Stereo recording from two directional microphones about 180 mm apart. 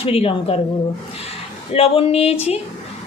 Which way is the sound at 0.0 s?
30° left (ahead or behind).